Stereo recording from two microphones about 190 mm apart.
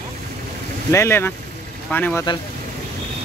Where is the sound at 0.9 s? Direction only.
10° left (ahead or behind).